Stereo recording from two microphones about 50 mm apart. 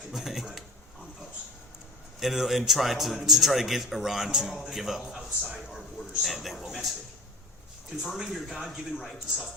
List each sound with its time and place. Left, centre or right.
0.1 s a man's voice: centre
2.1 s a man's voice: centre
8.2 s a man's voice: centre